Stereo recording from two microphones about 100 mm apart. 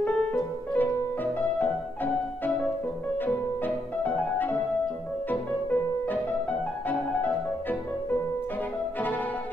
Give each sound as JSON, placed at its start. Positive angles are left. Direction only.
{"t": 0.0, "sound": "music", "side_deg": 15}